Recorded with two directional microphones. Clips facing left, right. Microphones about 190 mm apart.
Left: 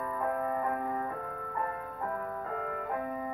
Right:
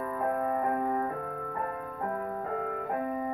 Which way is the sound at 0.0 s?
45° right (ahead or behind).